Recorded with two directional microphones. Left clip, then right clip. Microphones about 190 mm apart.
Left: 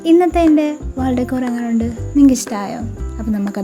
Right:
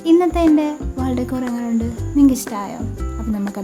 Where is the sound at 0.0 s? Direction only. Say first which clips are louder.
Left 2 dB; 15° left (ahead or behind).